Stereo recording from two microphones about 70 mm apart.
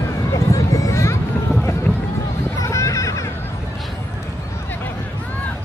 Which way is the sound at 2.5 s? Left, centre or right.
Left.